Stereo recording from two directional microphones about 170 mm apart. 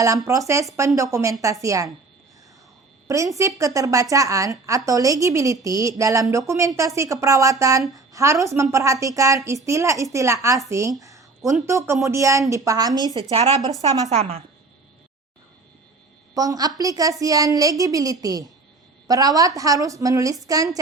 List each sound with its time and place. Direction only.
0.0 s a woman's voice: 20° right (ahead or behind)
3.1 s a woman's voice: 20° right (ahead or behind)
11.0 s a sound: 20° right (ahead or behind)
11.6 s a woman's voice: 15° right (ahead or behind)
13.3 s a woman's voice: 35° right (ahead or behind)
16.3 s a woman's voice: 20° right (ahead or behind)